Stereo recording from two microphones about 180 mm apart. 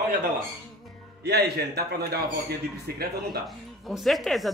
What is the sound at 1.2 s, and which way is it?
A man's voice, 65° right (ahead or behind).